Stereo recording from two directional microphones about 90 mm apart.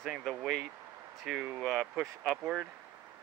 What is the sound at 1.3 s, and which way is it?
Speech, 10° right (ahead or behind).